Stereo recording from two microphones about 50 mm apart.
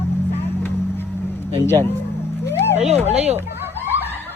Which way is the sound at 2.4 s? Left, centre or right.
Left.